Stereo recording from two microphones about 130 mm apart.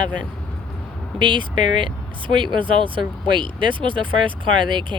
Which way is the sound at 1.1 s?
40° right (ahead or behind).